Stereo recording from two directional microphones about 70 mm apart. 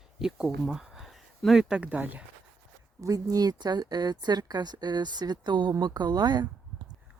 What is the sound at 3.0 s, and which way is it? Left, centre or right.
A woman's voice, right.